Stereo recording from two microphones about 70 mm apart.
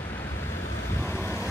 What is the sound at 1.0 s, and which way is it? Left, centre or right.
Vehicle, left.